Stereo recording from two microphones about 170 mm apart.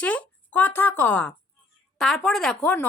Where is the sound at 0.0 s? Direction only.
10° left (ahead or behind).